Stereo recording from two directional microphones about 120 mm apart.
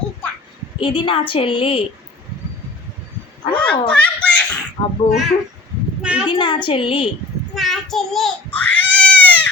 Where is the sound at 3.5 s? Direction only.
10° left (ahead or behind).